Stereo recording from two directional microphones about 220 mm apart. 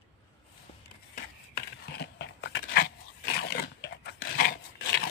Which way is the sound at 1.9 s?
50° left (ahead or behind).